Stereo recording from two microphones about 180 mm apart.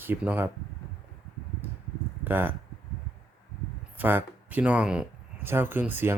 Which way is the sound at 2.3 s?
10° right (ahead or behind).